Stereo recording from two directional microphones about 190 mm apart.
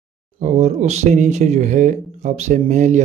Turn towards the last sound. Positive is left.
turn(degrees=-40)  # may be behind; listen again after turning